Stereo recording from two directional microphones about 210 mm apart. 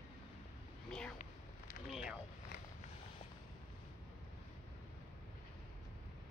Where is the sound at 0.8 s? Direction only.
5° left (ahead or behind).